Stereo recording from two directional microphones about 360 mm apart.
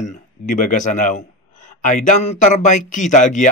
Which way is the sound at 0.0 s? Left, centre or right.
Left.